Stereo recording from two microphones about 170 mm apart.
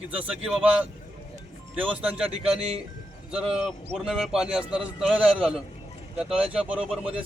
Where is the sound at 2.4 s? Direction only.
35° right (ahead or behind).